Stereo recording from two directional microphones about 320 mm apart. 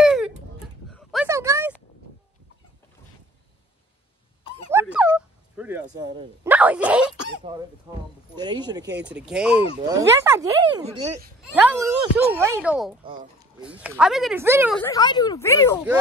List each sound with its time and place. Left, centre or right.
0.0 s a sound: centre
4.6 s a sound: centre
7.4 s speech: centre
11.0 s speech: right
12.0 s speech: centre
14.8 s speech: centre